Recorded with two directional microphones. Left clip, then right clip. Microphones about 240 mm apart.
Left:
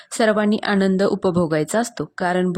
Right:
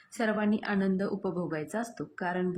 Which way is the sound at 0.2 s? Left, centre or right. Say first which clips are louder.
Left 12 dB; left.